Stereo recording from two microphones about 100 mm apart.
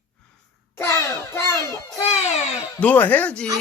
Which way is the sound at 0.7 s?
25° left (ahead or behind).